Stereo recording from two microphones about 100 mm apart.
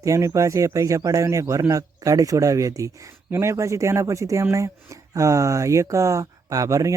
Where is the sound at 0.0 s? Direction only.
30° right (ahead or behind).